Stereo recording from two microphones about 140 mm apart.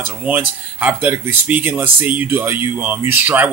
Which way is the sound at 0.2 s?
10° right (ahead or behind).